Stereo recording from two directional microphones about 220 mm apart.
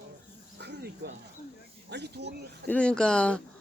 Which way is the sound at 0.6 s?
50° right (ahead or behind).